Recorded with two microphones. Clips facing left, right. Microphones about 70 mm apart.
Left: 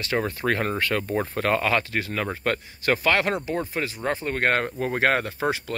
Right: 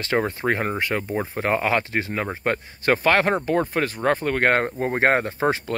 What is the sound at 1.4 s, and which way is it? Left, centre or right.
Speech, right.